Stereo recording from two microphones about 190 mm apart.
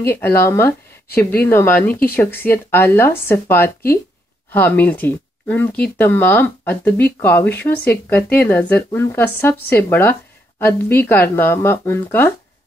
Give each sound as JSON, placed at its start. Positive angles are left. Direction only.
{"t": 0.0, "sound": "speech", "side_deg": 10}